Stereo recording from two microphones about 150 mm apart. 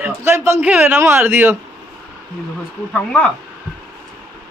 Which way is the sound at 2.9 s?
10° left (ahead or behind).